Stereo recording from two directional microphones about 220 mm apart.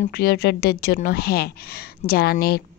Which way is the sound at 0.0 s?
45° left (ahead or behind).